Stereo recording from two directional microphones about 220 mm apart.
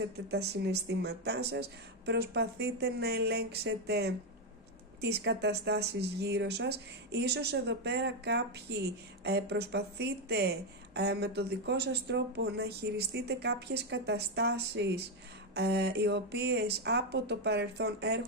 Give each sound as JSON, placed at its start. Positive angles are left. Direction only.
{"t": 0.3, "sound": "a woman's voice", "side_deg": -50}